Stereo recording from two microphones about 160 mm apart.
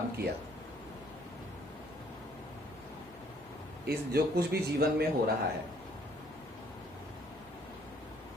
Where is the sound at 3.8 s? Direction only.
75° right (ahead or behind).